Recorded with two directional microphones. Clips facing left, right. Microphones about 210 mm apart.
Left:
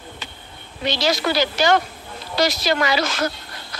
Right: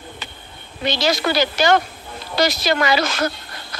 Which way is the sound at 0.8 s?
55° right (ahead or behind).